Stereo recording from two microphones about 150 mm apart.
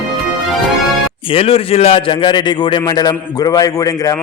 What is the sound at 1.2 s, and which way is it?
A man's voice, 40° left (ahead or behind).